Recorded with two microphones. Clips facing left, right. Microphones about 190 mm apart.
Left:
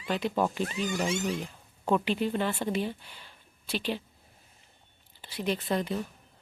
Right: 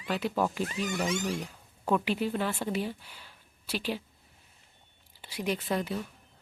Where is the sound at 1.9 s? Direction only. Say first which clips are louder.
Left 1 dB; 5° right (ahead or behind).